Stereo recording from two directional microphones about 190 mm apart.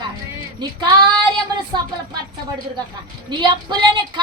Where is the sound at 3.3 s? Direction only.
25° right (ahead or behind).